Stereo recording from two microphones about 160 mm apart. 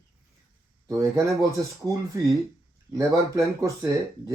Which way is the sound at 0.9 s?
20° right (ahead or behind).